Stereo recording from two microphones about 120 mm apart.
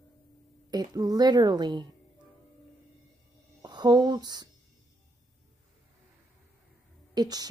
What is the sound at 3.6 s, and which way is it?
Speech, 35° right (ahead or behind).